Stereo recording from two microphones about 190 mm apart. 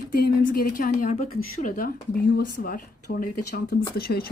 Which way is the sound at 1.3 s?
90° left.